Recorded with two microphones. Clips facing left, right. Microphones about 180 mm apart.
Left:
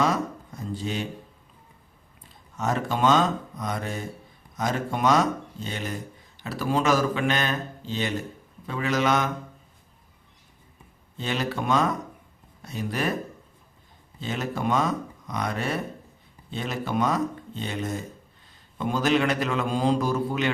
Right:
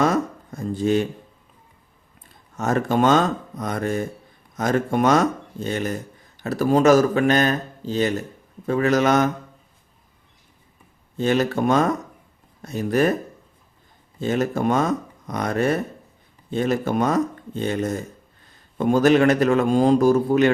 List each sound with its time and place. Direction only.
0.0 s a sound: 50° right (ahead or behind)
2.6 s a man's voice: 50° right (ahead or behind)
11.2 s a man's voice: 45° right (ahead or behind)
14.2 s a man's voice: 45° right (ahead or behind)